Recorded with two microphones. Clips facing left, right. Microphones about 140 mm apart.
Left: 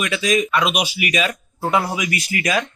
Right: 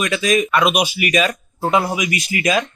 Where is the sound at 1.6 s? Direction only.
20° right (ahead or behind).